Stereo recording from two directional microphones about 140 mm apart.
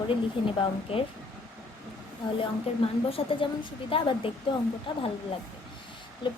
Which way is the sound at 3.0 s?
40° left (ahead or behind).